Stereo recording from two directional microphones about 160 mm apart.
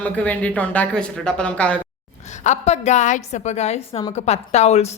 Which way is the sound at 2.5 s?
45° left (ahead or behind).